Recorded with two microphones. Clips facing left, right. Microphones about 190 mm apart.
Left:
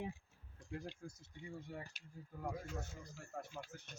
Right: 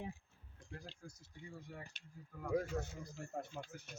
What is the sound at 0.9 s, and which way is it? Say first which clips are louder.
Speech: left 4 dB; 25° left (ahead or behind).